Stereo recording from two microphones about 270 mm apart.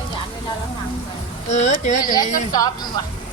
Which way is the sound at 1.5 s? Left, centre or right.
Left.